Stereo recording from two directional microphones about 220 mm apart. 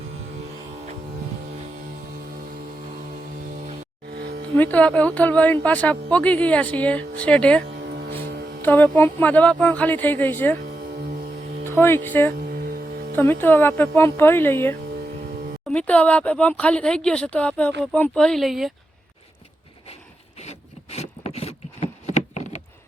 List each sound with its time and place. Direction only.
4.1 s music: 50° right (ahead or behind)
4.5 s speech: 5° left (ahead or behind)
7.8 s music: 50° right (ahead or behind)
8.6 s speech: 10° left (ahead or behind)
11.6 s speech: 10° left (ahead or behind)
12.5 s music: 45° right (ahead or behind)
13.1 s speech: 10° left (ahead or behind)
20.4 s wood: 30° left (ahead or behind)